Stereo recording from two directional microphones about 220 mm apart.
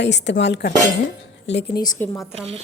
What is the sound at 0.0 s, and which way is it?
Speech, 50° left (ahead or behind).